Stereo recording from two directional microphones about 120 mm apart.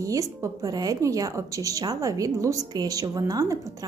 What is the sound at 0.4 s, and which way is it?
A woman's voice, 30° right (ahead or behind).